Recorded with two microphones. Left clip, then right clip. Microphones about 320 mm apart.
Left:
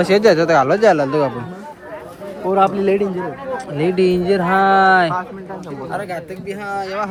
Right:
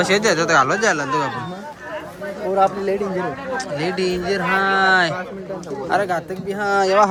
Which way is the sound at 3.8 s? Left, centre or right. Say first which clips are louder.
Left 8 dB; centre.